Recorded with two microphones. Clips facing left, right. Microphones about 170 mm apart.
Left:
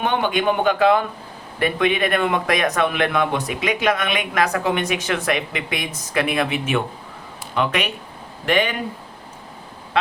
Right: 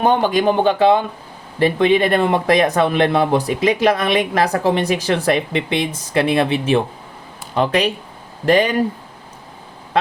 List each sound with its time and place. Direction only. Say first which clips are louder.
0.0 s speech: right 5 dB; 35° right (ahead or behind)